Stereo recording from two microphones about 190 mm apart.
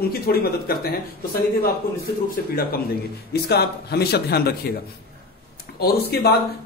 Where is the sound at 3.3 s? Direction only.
60° left (ahead or behind).